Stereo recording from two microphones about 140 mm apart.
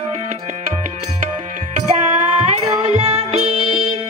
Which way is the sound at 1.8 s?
55° right (ahead or behind).